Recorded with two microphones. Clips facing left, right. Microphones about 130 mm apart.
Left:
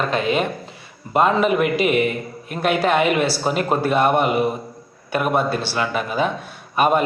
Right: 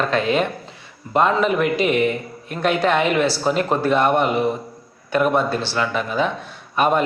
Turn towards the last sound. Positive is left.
turn(degrees=10)  # may be behind; listen again after turning